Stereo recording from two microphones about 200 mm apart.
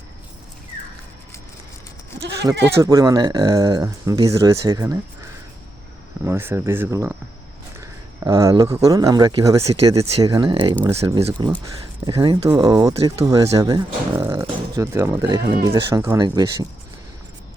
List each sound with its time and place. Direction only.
2.8 s speech: 20° right (ahead or behind)
6.2 s speech: 10° right (ahead or behind)
10.0 s speech: 30° right (ahead or behind)
10.8 s speech: 15° right (ahead or behind)
11.2 s speech: 25° right (ahead or behind)